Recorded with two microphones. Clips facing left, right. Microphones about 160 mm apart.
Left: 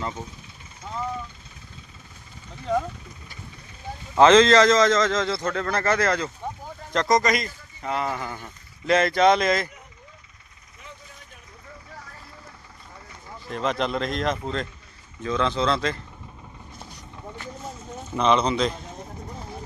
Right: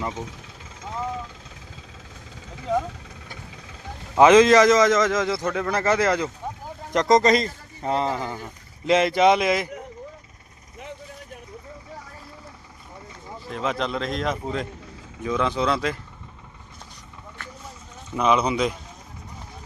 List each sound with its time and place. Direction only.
0.1 s speech: 90° right
4.2 s a man's voice: 15° right (ahead or behind)
13.5 s a man's voice: centre (ahead or behind)
18.2 s a man's voice: 10° right (ahead or behind)